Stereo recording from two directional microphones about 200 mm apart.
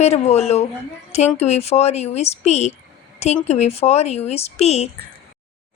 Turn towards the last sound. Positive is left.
turn(degrees=30)  # may be behind; listen again after turning